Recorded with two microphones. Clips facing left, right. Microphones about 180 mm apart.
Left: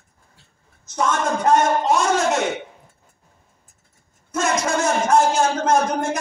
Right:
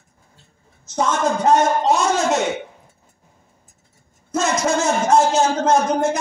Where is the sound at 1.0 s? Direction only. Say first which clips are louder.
Right 2 dB; 25° right (ahead or behind).